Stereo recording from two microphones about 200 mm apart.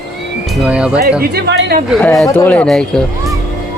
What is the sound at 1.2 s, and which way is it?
Speech, 55° right (ahead or behind).